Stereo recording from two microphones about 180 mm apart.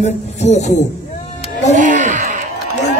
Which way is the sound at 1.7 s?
45° right (ahead or behind).